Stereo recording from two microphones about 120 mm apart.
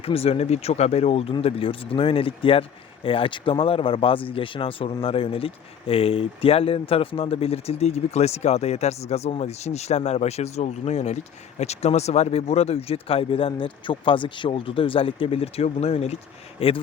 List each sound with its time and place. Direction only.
0.0 s speech: 55° left (ahead or behind)